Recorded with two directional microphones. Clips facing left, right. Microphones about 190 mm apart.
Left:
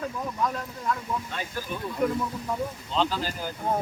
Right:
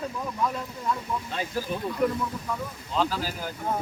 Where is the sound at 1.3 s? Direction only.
35° right (ahead or behind).